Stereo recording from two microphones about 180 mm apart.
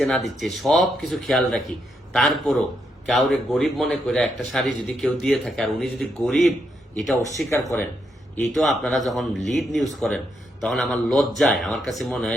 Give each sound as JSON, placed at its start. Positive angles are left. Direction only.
{"t": 0.3, "sound": "a man's voice", "side_deg": 0}
{"t": 7.5, "sound": "speech", "side_deg": 15}
{"t": 8.5, "sound": "a man's voice", "side_deg": 0}